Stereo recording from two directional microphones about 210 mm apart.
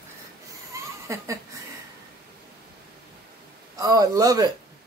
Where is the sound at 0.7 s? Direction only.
15° right (ahead or behind).